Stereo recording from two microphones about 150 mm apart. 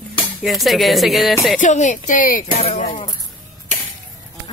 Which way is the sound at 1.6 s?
55° left (ahead or behind).